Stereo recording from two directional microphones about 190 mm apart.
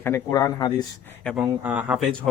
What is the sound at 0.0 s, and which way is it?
Speech, 15° left (ahead or behind).